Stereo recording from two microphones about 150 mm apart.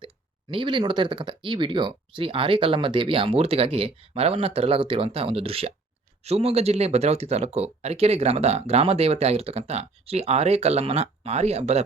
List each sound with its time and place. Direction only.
0.5 s speech: 35° right (ahead or behind)